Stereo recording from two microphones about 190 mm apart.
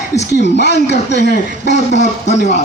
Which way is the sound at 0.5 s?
60° left (ahead or behind).